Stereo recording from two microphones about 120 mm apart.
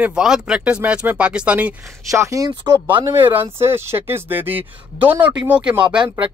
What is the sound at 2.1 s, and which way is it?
Speech, 25° right (ahead or behind).